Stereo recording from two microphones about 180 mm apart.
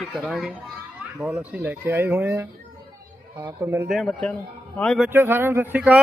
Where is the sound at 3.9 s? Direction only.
Centre (ahead or behind).